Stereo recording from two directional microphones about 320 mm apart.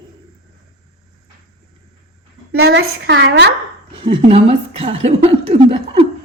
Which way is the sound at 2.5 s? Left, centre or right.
Right.